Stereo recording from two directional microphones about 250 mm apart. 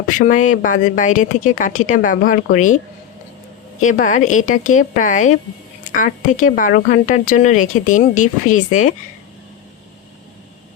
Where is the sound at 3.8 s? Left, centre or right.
Left.